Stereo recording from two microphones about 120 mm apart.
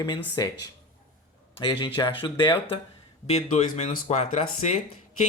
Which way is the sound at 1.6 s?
40° left (ahead or behind).